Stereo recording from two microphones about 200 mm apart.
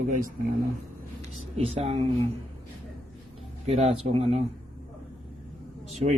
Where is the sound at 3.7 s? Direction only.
30° right (ahead or behind).